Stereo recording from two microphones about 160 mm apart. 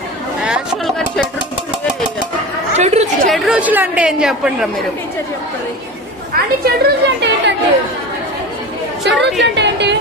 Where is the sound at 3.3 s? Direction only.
5° right (ahead or behind).